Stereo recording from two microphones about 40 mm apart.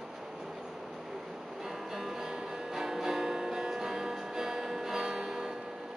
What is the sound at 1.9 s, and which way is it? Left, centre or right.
Music, centre.